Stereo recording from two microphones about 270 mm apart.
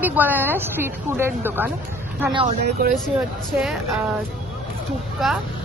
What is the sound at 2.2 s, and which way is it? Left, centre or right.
Speech, centre.